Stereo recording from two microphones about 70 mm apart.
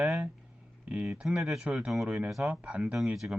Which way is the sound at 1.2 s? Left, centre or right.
Centre.